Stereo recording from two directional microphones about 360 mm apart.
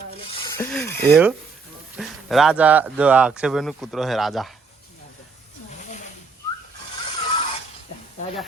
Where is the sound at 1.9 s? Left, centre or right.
Centre.